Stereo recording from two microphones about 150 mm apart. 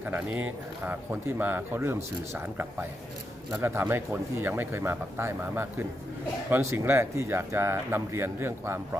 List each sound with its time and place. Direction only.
0.0 s speech: 10° right (ahead or behind)